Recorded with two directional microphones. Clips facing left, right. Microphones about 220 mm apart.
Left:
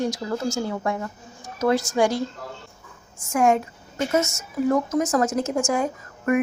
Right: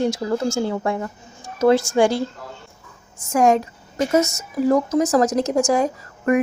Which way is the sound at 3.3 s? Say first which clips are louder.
Right 3 dB; 40° right (ahead or behind).